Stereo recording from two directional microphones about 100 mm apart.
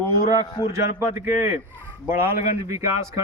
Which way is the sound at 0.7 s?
25° right (ahead or behind).